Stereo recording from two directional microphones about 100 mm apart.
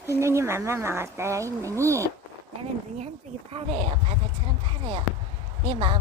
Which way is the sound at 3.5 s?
70° right (ahead or behind).